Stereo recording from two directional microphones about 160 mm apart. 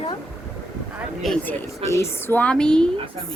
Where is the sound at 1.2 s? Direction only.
5° left (ahead or behind).